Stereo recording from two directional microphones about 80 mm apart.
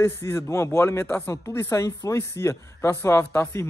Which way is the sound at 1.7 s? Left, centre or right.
Left.